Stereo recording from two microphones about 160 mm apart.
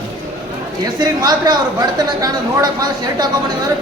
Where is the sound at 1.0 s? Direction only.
25° right (ahead or behind).